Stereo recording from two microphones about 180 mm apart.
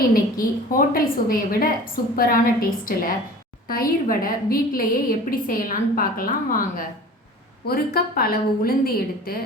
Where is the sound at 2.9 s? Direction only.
50° left (ahead or behind).